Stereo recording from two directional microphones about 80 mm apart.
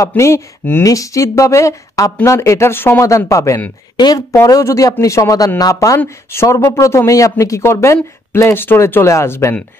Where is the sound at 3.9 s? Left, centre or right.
Left.